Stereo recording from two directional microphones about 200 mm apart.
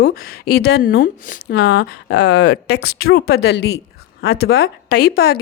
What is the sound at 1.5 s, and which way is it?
A woman's voice, 55° left (ahead or behind).